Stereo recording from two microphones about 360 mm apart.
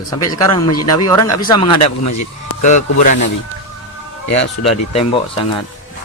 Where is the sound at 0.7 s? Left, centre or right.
Left.